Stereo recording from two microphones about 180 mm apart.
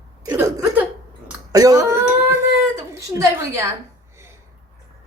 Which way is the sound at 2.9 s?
15° right (ahead or behind).